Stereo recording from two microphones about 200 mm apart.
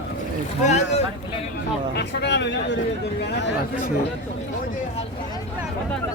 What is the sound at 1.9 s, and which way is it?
A man's voice, 60° left (ahead or behind).